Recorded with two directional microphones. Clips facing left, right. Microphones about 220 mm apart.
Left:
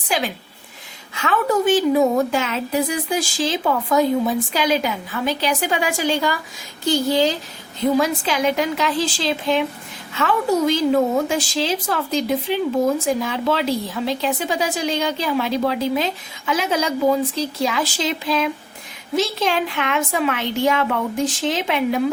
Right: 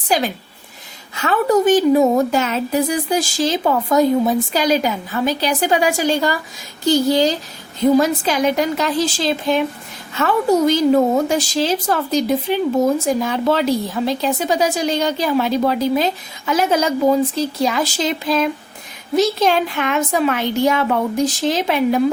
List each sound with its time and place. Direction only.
0.1 s a woman's voice: 40° right (ahead or behind)